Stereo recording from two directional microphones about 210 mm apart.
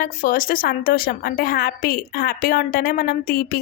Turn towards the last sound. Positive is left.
turn(degrees=45)  # may be behind; listen again after turning